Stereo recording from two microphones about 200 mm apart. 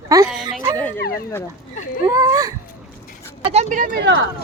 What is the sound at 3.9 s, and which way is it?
Speech, 60° right (ahead or behind).